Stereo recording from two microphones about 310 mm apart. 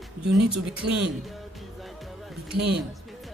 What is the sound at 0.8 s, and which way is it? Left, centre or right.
Speech, right.